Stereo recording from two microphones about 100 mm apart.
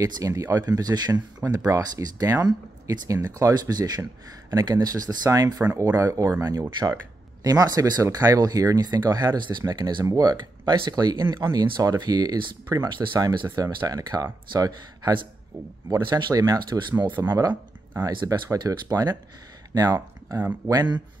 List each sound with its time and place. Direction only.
0.0 s speech: 35° right (ahead or behind)
7.4 s speech: 40° right (ahead or behind)
16.2 s speech: 45° right (ahead or behind)